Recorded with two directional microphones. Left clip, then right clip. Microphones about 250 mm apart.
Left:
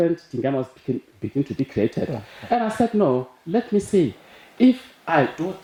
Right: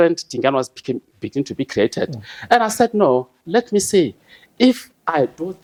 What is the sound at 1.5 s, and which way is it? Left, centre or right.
Speech, right.